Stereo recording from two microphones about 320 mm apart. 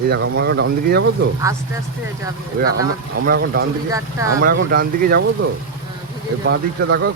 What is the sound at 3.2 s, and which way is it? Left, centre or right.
Speech, right.